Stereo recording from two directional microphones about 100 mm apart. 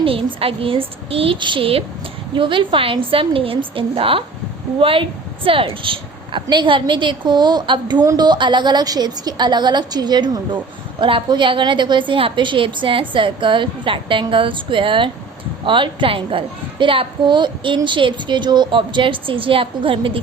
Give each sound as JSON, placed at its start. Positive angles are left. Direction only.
{"t": 0.0, "sound": "a woman's voice", "side_deg": -65}